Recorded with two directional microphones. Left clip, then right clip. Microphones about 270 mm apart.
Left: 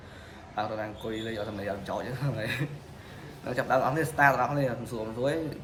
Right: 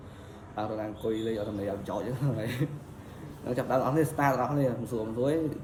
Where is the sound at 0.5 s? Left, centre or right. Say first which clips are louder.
Left 1 dB; centre.